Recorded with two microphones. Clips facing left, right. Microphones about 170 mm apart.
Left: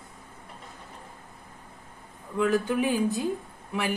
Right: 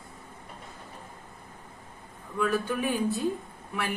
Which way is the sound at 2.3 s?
15° left (ahead or behind).